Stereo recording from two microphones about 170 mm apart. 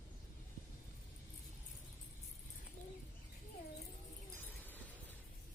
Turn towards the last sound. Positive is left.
turn(degrees=10)  # may be behind; listen again after turning